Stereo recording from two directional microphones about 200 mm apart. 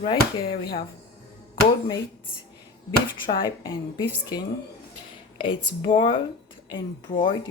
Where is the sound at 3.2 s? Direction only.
25° left (ahead or behind).